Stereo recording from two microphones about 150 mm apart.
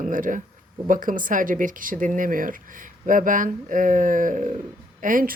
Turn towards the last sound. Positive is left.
turn(degrees=-65)  # may be behind; listen again after turning